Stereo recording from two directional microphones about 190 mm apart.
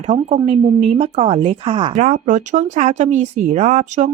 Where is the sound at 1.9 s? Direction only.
40° right (ahead or behind).